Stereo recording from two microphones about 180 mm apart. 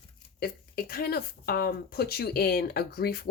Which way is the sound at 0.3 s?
55° left (ahead or behind).